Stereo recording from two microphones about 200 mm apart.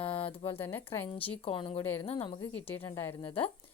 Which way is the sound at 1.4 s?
25° left (ahead or behind).